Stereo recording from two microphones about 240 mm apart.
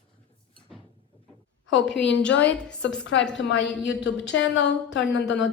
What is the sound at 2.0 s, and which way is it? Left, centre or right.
Speech, left.